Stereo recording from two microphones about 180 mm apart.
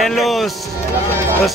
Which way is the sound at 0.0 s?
Centre (ahead or behind).